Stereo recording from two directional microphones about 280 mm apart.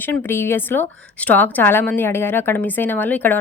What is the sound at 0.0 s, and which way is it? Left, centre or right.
A woman's voice, centre.